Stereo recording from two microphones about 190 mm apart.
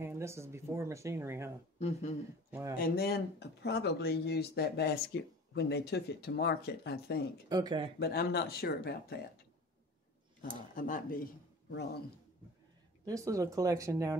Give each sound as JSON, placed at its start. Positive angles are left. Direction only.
{"t": 0.0, "sound": "speech", "side_deg": -15}
{"t": 1.8, "sound": "speech", "side_deg": 35}
{"t": 2.8, "sound": "speech", "side_deg": 55}
{"t": 7.4, "sound": "speech", "side_deg": -25}
{"t": 8.0, "sound": "speech", "side_deg": 55}
{"t": 10.8, "sound": "speech", "side_deg": 45}
{"t": 11.7, "sound": "speech", "side_deg": 60}
{"t": 13.0, "sound": "speech", "side_deg": -15}